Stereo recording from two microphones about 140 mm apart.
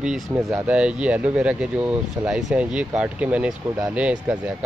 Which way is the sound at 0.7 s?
10° right (ahead or behind).